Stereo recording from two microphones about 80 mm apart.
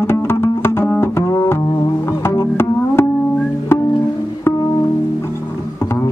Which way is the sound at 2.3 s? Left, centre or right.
Left.